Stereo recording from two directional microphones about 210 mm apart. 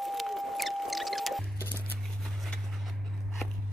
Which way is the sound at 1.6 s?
10° left (ahead or behind).